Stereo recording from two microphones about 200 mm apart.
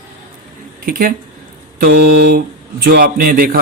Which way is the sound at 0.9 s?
45° right (ahead or behind).